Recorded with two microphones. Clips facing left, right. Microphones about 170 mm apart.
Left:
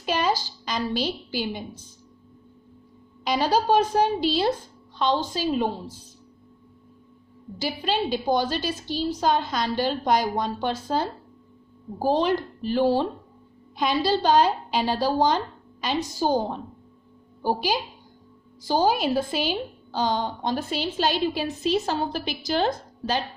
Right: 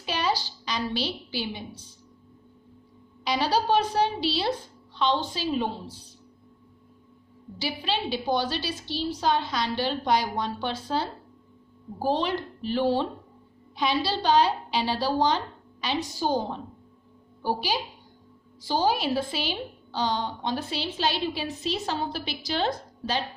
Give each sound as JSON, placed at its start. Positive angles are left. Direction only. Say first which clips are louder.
{"t": 0.0, "sound": "a woman's voice", "louder": "left 3 dB", "side_deg": 45}
{"t": 3.2, "sound": "a woman's voice", "louder": "left 3 dB", "side_deg": 45}
{"t": 7.6, "sound": "a woman's voice", "louder": "left 4 dB", "side_deg": 45}